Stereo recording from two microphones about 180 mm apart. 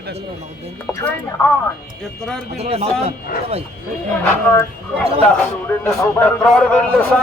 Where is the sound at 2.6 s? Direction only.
35° right (ahead or behind).